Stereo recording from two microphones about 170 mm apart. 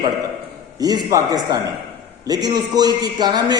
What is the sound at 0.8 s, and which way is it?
A man's voice, 20° right (ahead or behind).